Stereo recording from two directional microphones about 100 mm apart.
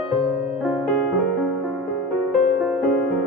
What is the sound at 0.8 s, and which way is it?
Music, centre (ahead or behind).